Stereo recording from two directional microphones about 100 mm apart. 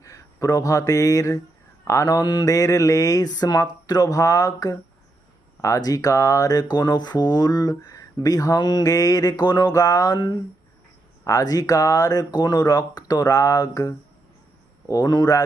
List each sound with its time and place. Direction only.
0.0 s speech: 35° left (ahead or behind)